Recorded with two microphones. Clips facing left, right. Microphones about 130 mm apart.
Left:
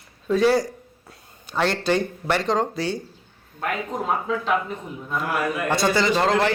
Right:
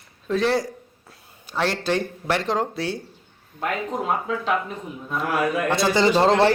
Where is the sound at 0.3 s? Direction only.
Centre (ahead or behind).